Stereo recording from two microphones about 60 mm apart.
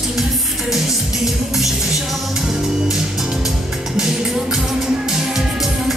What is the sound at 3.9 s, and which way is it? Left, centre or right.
Music, centre.